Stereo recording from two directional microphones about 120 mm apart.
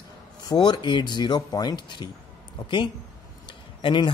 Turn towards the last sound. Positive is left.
turn(degrees=45)  # may be behind; listen again after turning